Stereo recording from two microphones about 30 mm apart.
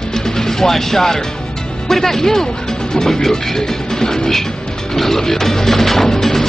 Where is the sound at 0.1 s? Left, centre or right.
Centre.